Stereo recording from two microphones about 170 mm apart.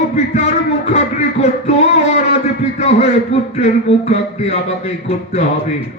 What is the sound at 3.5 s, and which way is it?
Speech, 40° left (ahead or behind).